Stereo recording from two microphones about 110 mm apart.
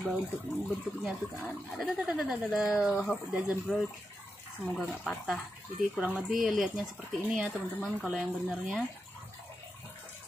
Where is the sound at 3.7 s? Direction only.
5° left (ahead or behind).